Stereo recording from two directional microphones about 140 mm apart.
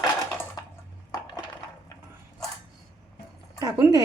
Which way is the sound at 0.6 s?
30° left (ahead or behind).